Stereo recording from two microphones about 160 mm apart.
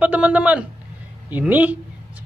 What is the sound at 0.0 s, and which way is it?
A man's voice, 10° right (ahead or behind).